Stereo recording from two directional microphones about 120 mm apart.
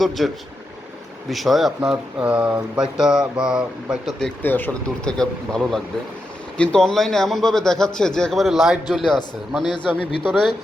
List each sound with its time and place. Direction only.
0.2 s speech: centre (ahead or behind)
4.4 s speech: 15° left (ahead or behind)
5.1 s speech: 5° left (ahead or behind)